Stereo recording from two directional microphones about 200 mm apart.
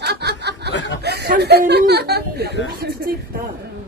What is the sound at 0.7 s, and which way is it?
Snicker, 65° left (ahead or behind).